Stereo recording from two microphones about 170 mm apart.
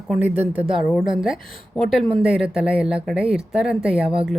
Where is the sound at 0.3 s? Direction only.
40° right (ahead or behind).